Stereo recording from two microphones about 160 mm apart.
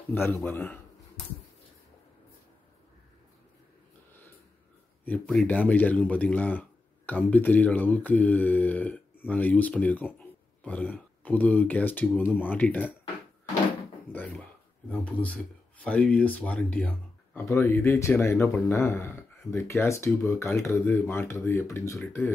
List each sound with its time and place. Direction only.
0.1 s speech: 10° left (ahead or behind)
5.0 s speech: 10° left (ahead or behind)
14.1 s speech: 10° left (ahead or behind)